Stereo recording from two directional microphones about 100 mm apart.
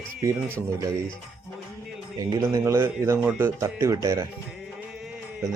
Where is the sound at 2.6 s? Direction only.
25° right (ahead or behind).